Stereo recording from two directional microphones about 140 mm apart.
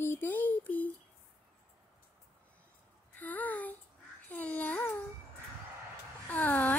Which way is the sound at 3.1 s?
10° left (ahead or behind).